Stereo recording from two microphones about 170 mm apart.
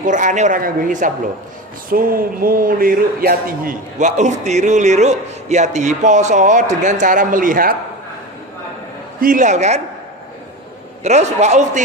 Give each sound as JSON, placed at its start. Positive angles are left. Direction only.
{"t": 0.0, "sound": "speech", "side_deg": -50}
{"t": 9.2, "sound": "speech", "side_deg": -50}
{"t": 11.0, "sound": "a man's voice", "side_deg": -40}